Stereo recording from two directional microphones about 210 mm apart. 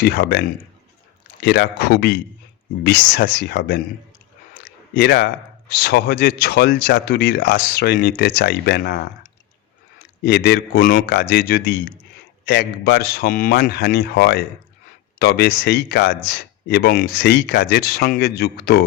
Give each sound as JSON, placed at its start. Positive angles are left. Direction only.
{"t": 0.0, "sound": "speech", "side_deg": 50}
{"t": 4.9, "sound": "speech", "side_deg": 50}
{"t": 10.2, "sound": "speech", "side_deg": 50}
{"t": 11.1, "sound": "speech", "side_deg": 50}
{"t": 13.9, "sound": "speech", "side_deg": 55}